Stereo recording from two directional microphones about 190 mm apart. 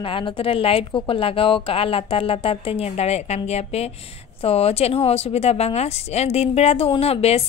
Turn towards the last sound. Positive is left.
turn(degrees=30)  # may be behind; listen again after turning